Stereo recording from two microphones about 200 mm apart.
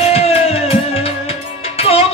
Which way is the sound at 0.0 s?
30° left (ahead or behind).